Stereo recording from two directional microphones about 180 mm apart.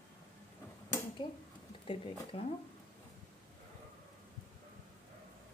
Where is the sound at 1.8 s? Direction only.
30° left (ahead or behind).